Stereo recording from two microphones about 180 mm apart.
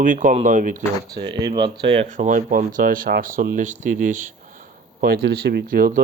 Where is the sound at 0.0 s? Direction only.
45° right (ahead or behind).